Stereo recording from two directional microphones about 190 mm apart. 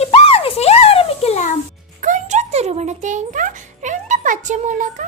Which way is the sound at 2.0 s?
40° right (ahead or behind).